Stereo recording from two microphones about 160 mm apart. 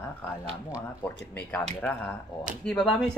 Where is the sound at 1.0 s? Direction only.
10° left (ahead or behind).